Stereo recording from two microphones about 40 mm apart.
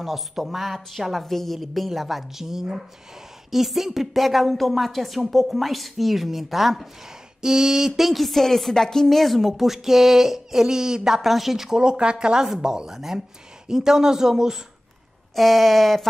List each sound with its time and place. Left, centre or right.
0.0 s a woman's voice: centre
7.4 s a woman's voice: centre
11.8 s speech: right
15.3 s a woman's voice: centre